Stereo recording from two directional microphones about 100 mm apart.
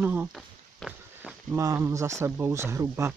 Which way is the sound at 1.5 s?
30° right (ahead or behind).